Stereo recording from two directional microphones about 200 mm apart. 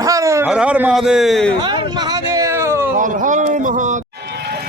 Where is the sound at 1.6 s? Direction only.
20° right (ahead or behind).